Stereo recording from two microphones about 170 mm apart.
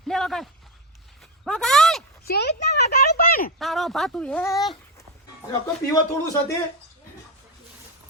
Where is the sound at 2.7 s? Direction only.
70° left (ahead or behind).